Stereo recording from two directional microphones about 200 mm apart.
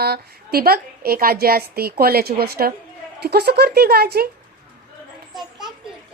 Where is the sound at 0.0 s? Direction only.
50° right (ahead or behind).